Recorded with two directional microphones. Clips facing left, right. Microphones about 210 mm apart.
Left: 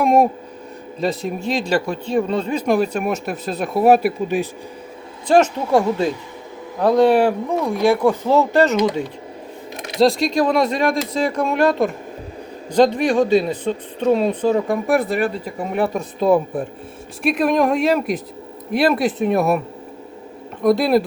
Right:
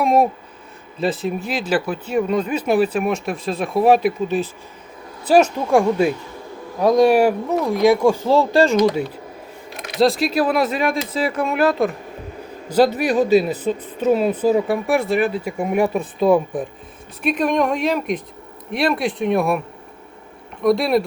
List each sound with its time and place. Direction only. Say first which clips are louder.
0.0 s speech: left 1 dB; centre (ahead or behind)
2.3 s speech: right 1 dB; 30° left (ahead or behind)
2.6 s speech: even; 5° right (ahead or behind)
5.3 s speech: even; 10° right (ahead or behind)
10.0 s speech: left 1 dB; centre (ahead or behind)
20.7 s speech: left 1 dB; centre (ahead or behind)